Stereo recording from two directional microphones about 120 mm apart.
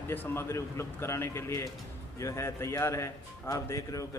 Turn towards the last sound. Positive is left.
turn(degrees=25)  # may be behind; listen again after turning